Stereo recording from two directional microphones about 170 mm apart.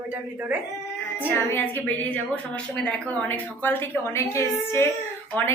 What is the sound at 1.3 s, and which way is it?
A woman's voice, 10° left (ahead or behind).